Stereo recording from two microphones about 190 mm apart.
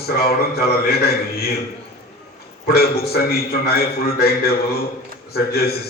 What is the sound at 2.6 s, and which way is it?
A man's voice, 55° left (ahead or behind).